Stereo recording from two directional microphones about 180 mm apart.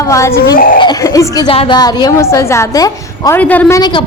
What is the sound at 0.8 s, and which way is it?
Speech, 20° left (ahead or behind).